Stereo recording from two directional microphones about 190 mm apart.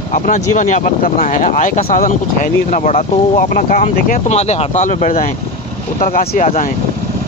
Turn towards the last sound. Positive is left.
turn(degrees=45)  # may be behind; listen again after turning